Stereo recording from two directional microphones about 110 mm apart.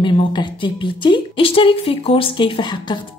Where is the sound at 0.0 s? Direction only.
45° left (ahead or behind).